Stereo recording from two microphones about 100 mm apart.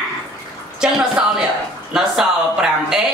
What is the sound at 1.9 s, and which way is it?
Speech, 5° right (ahead or behind).